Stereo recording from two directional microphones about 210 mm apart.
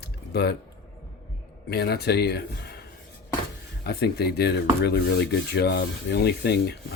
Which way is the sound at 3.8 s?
50° left (ahead or behind).